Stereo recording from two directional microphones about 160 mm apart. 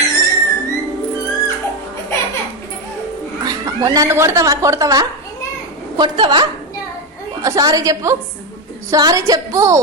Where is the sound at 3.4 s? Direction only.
25° right (ahead or behind).